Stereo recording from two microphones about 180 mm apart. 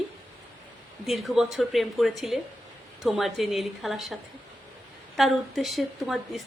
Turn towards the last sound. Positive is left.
turn(degrees=0)  # may be behind; listen again after turning